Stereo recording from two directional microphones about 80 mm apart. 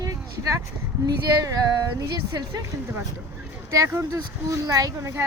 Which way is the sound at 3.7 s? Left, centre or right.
Right.